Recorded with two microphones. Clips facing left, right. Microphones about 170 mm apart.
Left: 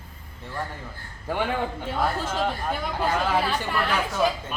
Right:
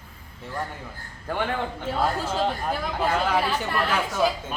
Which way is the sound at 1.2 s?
5° left (ahead or behind).